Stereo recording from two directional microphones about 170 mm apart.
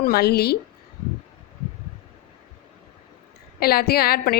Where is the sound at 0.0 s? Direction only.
65° left (ahead or behind).